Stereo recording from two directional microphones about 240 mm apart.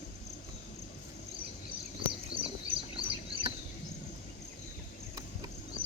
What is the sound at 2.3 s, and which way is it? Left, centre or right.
Bird, right.